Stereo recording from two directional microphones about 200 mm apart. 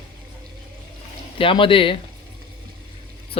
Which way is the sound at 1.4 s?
25° left (ahead or behind).